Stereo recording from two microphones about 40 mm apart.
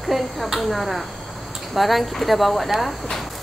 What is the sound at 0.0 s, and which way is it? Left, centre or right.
Speech, centre.